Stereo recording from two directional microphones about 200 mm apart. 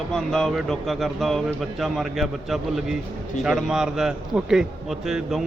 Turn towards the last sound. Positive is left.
turn(degrees=0)  # may be behind; listen again after turning